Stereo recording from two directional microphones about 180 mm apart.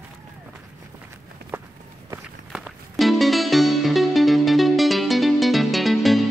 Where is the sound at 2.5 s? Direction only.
Centre (ahead or behind).